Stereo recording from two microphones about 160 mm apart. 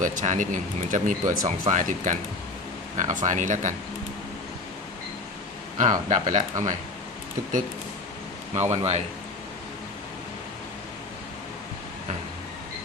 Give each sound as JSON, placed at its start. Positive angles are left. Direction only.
{"t": 0.0, "sound": "speech", "side_deg": -55}
{"t": 5.7, "sound": "speech", "side_deg": -50}
{"t": 8.7, "sound": "speech", "side_deg": -40}